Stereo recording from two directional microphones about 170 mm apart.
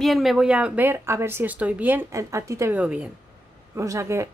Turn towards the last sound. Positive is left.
turn(degrees=-15)  # may be behind; listen again after turning